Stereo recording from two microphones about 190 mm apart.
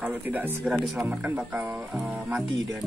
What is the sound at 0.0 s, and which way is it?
Speech, 10° right (ahead or behind).